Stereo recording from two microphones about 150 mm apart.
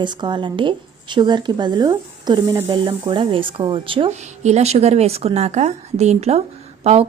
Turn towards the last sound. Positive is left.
turn(degrees=-45)  # may be behind; listen again after turning